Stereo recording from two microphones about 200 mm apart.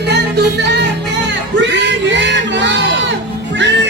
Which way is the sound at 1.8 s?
65° right (ahead or behind).